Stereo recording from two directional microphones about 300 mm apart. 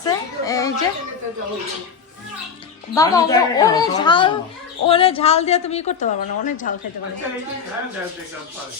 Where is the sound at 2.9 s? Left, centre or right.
Centre; by 6.8 s left.